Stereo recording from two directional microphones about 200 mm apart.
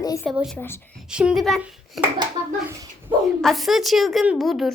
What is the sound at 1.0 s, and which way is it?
A woman's voice, 5° right (ahead or behind).